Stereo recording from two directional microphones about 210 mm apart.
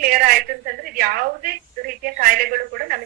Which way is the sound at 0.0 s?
45° right (ahead or behind).